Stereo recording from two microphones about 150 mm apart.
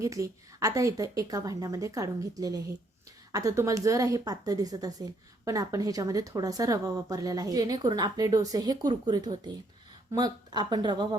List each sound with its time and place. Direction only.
0.0 s speech: 20° right (ahead or behind)